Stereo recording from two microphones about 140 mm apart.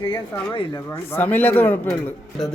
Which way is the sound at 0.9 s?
15° left (ahead or behind).